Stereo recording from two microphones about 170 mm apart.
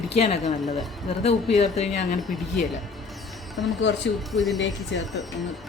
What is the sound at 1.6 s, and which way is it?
Speech, 40° left (ahead or behind).